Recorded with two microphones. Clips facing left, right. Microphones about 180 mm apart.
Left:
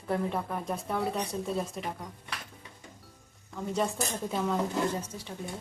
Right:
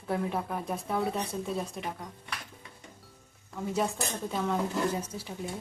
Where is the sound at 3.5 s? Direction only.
Centre (ahead or behind).